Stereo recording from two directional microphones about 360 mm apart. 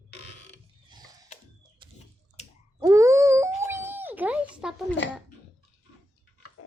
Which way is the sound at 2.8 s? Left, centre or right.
Centre.